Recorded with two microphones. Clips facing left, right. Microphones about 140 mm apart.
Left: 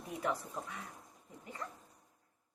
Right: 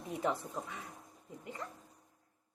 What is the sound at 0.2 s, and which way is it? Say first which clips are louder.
Speech: right 2 dB; 25° right (ahead or behind).